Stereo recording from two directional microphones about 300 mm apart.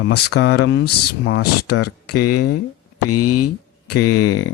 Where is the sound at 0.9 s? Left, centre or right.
Left.